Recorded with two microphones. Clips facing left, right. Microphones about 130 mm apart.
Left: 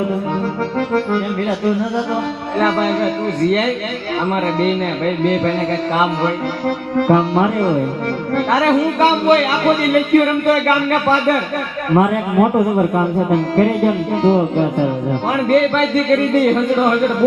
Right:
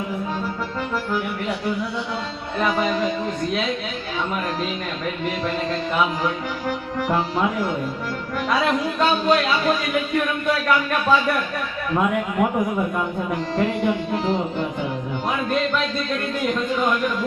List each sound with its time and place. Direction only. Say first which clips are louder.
0.9 s speech: left 7 dB; 65° left (ahead or behind)
2.6 s speech: left 5 dB; 70° left (ahead or behind)
5.2 s speech: left 8 dB; 70° left (ahead or behind)
11.9 s a man's voice: left 7 dB; 45° left (ahead or behind)
13.3 s speech: left 7 dB; 70° left (ahead or behind)
15.3 s speech: left 8 dB; 70° left (ahead or behind)